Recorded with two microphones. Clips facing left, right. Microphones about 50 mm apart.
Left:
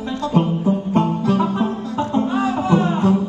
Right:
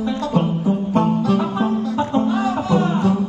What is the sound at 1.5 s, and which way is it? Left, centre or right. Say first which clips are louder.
Music: right 2 dB; right.